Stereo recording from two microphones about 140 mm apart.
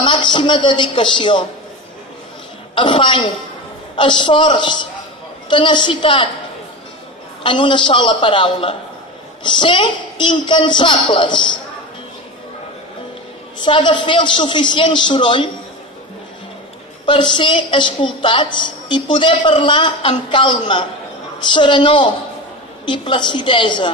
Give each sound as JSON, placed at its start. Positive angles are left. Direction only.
{"t": 0.0, "sound": "a woman's voice", "side_deg": 35}
{"t": 2.7, "sound": "a woman's voice", "side_deg": 35}
{"t": 7.4, "sound": "a woman's voice", "side_deg": 35}
{"t": 13.6, "sound": "a woman's voice", "side_deg": 35}
{"t": 17.0, "sound": "a woman's voice", "side_deg": 35}